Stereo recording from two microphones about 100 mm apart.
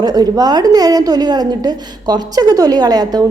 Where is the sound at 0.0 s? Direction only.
40° right (ahead or behind).